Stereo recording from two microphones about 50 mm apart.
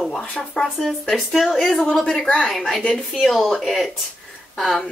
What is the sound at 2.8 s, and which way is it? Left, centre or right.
Speech, left.